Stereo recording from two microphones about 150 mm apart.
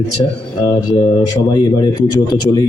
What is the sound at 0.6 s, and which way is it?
A man's voice, 25° left (ahead or behind).